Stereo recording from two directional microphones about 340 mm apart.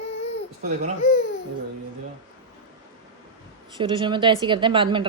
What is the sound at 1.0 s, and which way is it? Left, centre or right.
Speech, left.